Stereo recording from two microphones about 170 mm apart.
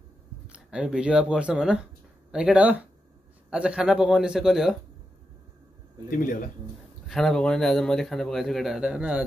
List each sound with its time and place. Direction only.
0.5 s speech: 5° right (ahead or behind)
6.0 s speech: 55° left (ahead or behind)
7.1 s speech: centre (ahead or behind)